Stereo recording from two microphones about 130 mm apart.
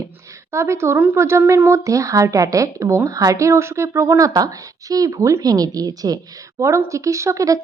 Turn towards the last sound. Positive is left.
turn(degrees=-25)  # may be behind; listen again after turning